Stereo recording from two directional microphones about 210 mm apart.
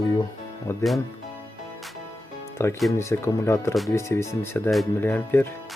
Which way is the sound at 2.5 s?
10° left (ahead or behind).